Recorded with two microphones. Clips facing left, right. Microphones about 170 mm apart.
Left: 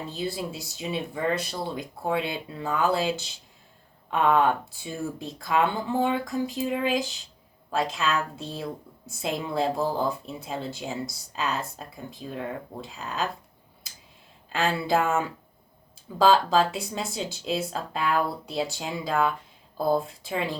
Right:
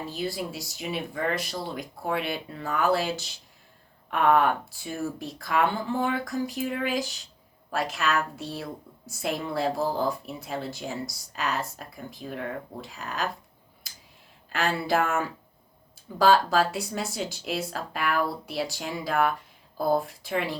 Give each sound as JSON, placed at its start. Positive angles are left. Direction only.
{"t": 0.1, "sound": "speech", "side_deg": 25}
{"t": 14.5, "sound": "speech", "side_deg": 20}